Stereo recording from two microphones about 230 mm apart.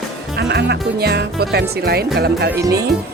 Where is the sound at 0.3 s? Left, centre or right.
Right.